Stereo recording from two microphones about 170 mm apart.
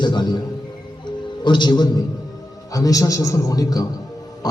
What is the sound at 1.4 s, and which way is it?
A man's voice, 25° left (ahead or behind).